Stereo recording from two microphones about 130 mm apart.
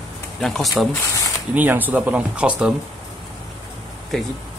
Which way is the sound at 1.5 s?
15° right (ahead or behind).